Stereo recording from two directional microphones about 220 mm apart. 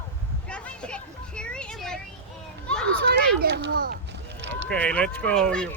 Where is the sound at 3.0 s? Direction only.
50° right (ahead or behind).